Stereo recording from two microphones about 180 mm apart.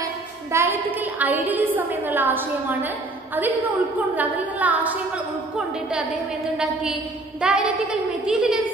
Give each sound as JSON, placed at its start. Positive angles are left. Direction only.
{"t": 0.5, "sound": "music", "side_deg": -15}
{"t": 1.2, "sound": "a woman's voice", "side_deg": -10}
{"t": 4.1, "sound": "a woman's voice", "side_deg": -10}
{"t": 6.6, "sound": "a woman's voice", "side_deg": -5}